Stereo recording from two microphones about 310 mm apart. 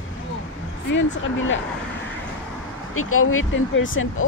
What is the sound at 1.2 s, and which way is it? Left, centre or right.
Speech, left.